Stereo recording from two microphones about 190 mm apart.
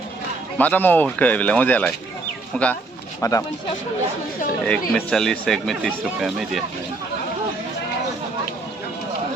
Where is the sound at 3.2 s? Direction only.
15° left (ahead or behind).